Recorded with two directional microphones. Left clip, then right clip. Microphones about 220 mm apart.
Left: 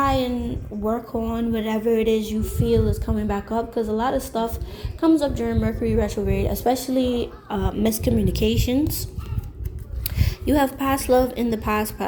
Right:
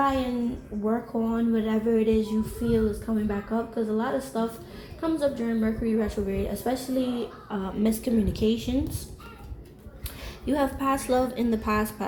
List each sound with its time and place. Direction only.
0.0 s a sound: 50° left (ahead or behind)
0.9 s a woman's voice: 50° left (ahead or behind)
10.2 s speech: 40° left (ahead or behind)